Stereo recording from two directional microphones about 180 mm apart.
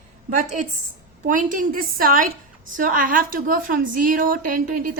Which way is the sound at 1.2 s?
45° right (ahead or behind).